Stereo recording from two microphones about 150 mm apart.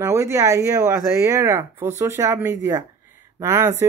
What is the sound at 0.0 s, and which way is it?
Speech, 20° right (ahead or behind).